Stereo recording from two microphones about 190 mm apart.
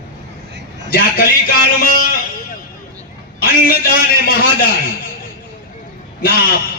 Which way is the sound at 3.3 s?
50° left (ahead or behind).